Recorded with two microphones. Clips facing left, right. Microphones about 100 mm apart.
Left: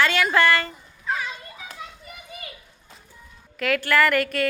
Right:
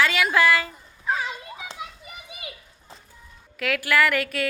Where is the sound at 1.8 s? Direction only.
10° right (ahead or behind).